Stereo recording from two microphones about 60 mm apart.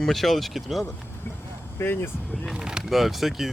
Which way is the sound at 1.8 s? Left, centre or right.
Left.